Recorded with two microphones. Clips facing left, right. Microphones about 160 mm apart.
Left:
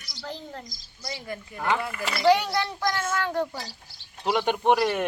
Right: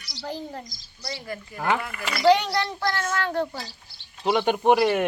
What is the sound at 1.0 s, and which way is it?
A child's voice, 20° left (ahead or behind).